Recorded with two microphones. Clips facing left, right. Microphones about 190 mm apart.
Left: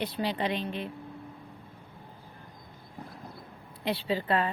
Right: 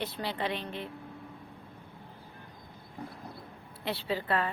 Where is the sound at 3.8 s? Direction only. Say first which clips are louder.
Left 3 dB; 15° left (ahead or behind).